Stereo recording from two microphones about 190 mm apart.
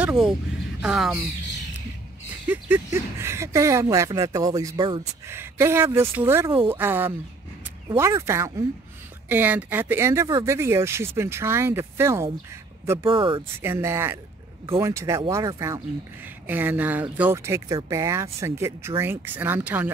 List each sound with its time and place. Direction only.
0.0 s a sound: 10° right (ahead or behind)
0.7 s speech: 5° right (ahead or behind)
2.4 s speech: 10° right (ahead or behind)
5.3 s speech: 15° right (ahead or behind)
13.0 s speech: 25° right (ahead or behind)
13.6 s speech: 15° right (ahead or behind)